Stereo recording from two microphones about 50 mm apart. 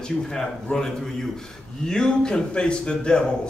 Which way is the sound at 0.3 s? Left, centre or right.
Centre.